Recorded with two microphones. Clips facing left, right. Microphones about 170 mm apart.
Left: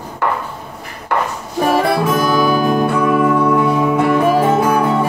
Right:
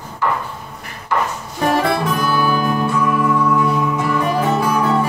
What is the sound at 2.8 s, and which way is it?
Music, 60° left (ahead or behind).